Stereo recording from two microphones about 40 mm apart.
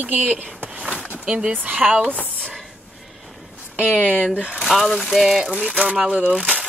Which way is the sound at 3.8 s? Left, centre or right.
Left.